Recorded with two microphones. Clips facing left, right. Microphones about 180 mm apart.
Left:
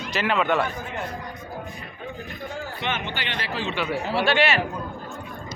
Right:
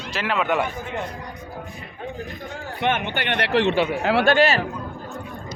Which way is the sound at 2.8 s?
55° right (ahead or behind).